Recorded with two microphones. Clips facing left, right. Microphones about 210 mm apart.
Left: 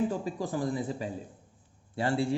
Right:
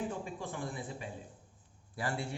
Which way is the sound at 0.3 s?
35° left (ahead or behind).